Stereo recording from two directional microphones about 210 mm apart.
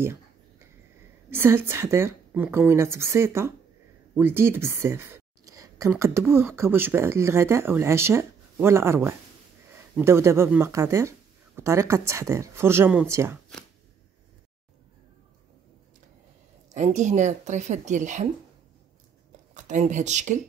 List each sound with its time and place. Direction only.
0.0 s a sound: 10° right (ahead or behind)
1.3 s speech: 10° right (ahead or behind)
16.7 s speech: 35° right (ahead or behind)
19.5 s speech: 35° right (ahead or behind)